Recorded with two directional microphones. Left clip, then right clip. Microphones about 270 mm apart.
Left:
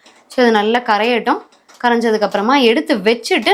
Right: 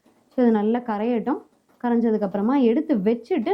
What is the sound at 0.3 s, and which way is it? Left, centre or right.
A woman's voice, centre.